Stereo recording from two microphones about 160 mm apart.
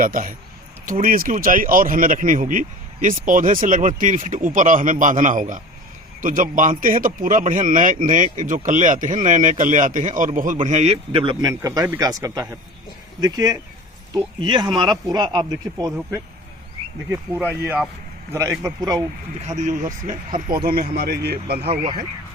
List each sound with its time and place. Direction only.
0.0 s speech: 60° right (ahead or behind); by 11.5 s 35° right (ahead or behind)
11.6 s speech: 20° right (ahead or behind)
17.5 s speech: 10° right (ahead or behind)
19.5 s speech: 50° right (ahead or behind)
20.7 s speech: 70° right (ahead or behind)
21.6 s speech: 40° right (ahead or behind)